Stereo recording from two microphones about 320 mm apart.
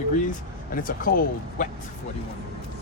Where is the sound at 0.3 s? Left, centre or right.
Left.